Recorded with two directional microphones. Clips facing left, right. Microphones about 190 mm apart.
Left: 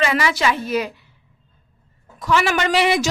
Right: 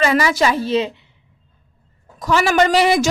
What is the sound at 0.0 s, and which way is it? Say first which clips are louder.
Speech: right 3 dB; 40° right (ahead or behind).